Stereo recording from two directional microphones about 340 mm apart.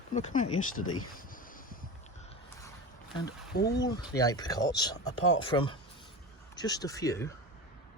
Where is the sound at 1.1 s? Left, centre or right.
Left.